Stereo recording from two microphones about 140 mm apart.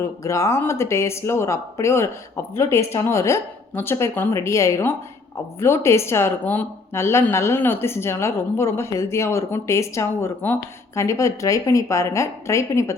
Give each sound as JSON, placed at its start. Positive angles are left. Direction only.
{"t": 0.0, "sound": "speech", "side_deg": 20}